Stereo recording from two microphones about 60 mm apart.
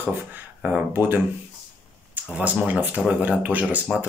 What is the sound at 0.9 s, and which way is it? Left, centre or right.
Speech, right.